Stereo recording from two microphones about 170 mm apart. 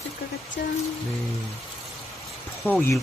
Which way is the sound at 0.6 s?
90° left.